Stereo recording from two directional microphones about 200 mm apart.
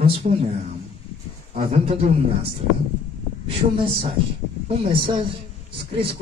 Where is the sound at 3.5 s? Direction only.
25° right (ahead or behind).